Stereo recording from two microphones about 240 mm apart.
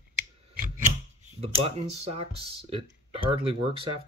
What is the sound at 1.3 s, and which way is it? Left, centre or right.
Speech, right.